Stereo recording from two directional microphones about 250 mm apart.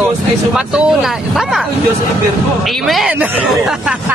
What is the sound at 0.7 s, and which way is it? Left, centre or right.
Speech, centre.